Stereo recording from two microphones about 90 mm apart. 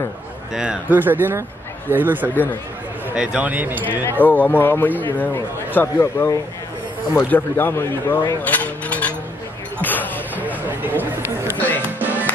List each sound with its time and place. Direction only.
0.6 s speech: 15° right (ahead or behind)
4.2 s a man's voice: 20° left (ahead or behind)
8.4 s a sound: 15° left (ahead or behind)
9.8 s basketball bounce: 20° left (ahead or behind)
10.3 s a sound: 20° right (ahead or behind)
11.5 s music: 20° left (ahead or behind)
12.0 s music: 20° right (ahead or behind)